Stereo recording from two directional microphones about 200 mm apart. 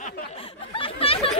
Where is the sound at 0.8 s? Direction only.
30° left (ahead or behind).